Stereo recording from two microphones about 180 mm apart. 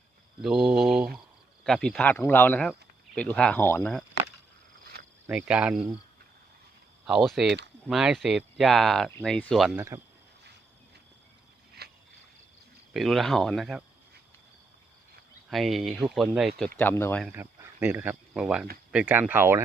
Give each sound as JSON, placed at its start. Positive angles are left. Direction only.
{"t": 0.4, "sound": "speech", "side_deg": 0}
{"t": 5.2, "sound": "speech", "side_deg": -10}
{"t": 7.0, "sound": "speech", "side_deg": 0}
{"t": 7.4, "sound": "speech", "side_deg": -75}
{"t": 7.9, "sound": "speech", "side_deg": 0}
{"t": 9.7, "sound": "speech", "side_deg": -15}
{"t": 11.8, "sound": "rowboat", "side_deg": -65}
{"t": 12.9, "sound": "speech", "side_deg": 0}
{"t": 15.4, "sound": "speech", "side_deg": 0}
{"t": 17.3, "sound": "speech", "side_deg": -10}